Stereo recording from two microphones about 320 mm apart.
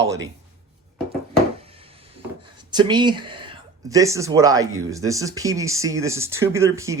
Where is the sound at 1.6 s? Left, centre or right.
Centre.